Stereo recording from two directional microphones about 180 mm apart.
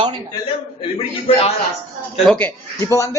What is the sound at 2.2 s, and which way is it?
Speech, 10° left (ahead or behind).